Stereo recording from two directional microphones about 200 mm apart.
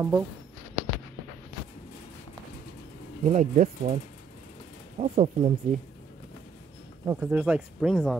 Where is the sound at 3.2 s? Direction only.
35° right (ahead or behind).